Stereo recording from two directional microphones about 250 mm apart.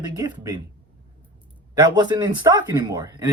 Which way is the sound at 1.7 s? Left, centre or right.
Centre.